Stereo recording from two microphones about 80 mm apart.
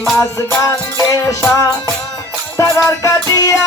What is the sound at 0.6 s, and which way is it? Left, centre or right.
Music, left.